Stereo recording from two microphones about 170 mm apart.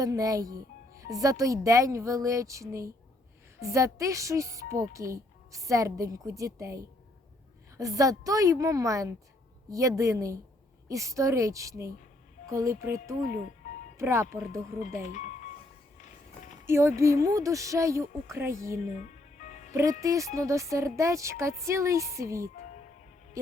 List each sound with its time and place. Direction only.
0.0 s speech: 20° right (ahead or behind)
15.0 s music: 50° left (ahead or behind)
16.6 s speech: 15° right (ahead or behind)
18.9 s music: 45° left (ahead or behind)
19.7 s speech: 20° right (ahead or behind)